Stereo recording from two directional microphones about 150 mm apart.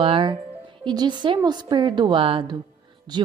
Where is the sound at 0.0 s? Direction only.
35° right (ahead or behind).